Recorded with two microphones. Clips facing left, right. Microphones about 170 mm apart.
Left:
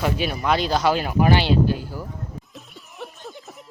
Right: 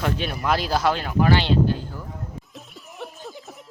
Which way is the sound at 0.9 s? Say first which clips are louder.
Left 1 dB; 15° left (ahead or behind).